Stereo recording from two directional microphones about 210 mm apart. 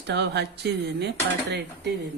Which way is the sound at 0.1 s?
55° right (ahead or behind).